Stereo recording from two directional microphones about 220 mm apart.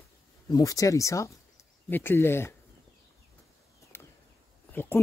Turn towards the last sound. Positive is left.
turn(degrees=10)  # may be behind; listen again after turning